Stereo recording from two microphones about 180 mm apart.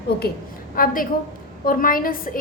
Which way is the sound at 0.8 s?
50° left (ahead or behind).